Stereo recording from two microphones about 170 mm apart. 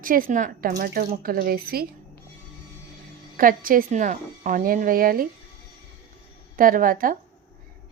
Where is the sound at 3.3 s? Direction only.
55° right (ahead or behind).